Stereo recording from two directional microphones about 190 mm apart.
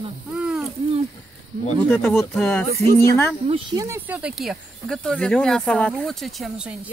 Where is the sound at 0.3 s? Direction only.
5° right (ahead or behind).